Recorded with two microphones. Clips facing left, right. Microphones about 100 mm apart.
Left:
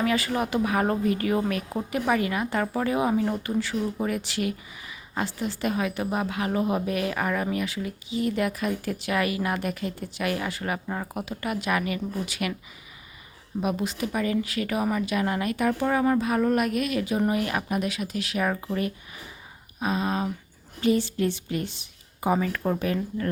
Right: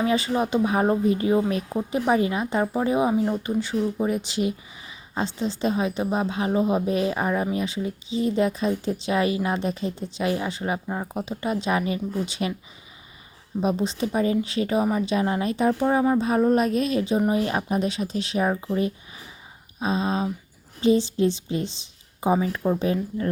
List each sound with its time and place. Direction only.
0.0 s speech: 25° right (ahead or behind)
13.6 s speech: 25° right (ahead or behind)